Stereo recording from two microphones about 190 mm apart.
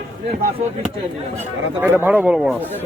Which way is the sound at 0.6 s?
40° right (ahead or behind).